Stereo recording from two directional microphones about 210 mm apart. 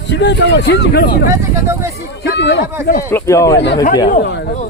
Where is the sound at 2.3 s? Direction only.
55° left (ahead or behind).